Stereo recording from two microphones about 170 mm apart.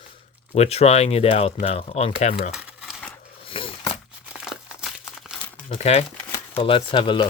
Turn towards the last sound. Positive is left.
turn(degrees=30)  # may be behind; listen again after turning